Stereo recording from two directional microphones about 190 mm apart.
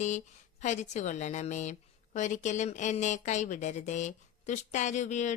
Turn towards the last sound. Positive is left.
turn(degrees=40)  # may be behind; listen again after turning